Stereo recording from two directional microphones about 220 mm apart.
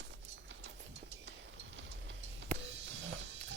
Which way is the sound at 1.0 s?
55° right (ahead or behind).